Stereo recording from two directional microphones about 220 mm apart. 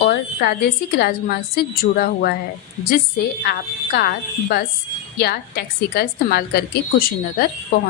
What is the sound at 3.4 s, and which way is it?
A woman's voice, 45° left (ahead or behind).